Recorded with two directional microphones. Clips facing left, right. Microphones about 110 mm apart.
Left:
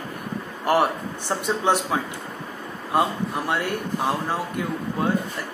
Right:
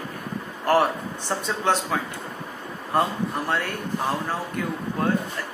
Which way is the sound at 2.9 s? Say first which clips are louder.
Left 1 dB; 15° left (ahead or behind).